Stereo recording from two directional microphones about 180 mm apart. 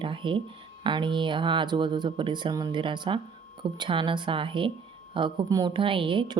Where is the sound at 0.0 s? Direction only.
30° right (ahead or behind).